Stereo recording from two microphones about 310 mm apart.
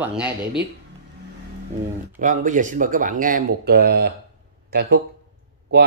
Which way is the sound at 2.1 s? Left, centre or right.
Right.